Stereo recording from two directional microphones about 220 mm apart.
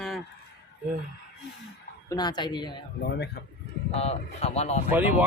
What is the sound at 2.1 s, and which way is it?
Speech, 20° left (ahead or behind).